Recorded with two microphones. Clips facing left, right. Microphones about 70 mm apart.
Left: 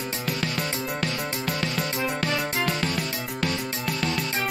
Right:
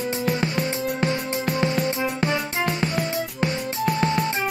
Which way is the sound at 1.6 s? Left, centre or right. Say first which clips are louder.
Right 5 dB; right.